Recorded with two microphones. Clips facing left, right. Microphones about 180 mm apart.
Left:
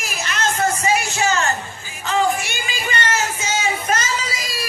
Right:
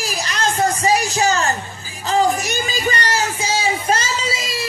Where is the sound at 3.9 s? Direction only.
30° right (ahead or behind).